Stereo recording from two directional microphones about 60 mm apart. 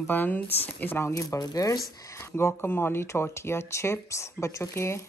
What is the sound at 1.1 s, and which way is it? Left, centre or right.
Speech, left.